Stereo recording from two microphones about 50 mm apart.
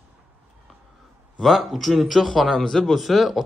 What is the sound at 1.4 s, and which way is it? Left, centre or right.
Speech, centre.